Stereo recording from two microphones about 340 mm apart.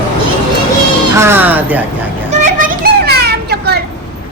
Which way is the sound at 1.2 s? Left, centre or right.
Centre.